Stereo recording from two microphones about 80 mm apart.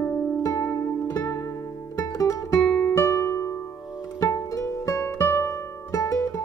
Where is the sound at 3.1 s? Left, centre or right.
Left.